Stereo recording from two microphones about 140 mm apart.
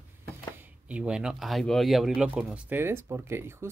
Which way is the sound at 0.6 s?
10° right (ahead or behind).